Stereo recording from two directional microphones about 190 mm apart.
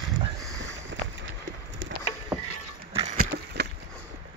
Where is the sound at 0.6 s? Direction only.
75° right (ahead or behind).